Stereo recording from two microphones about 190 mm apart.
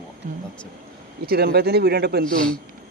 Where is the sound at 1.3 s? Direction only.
55° right (ahead or behind).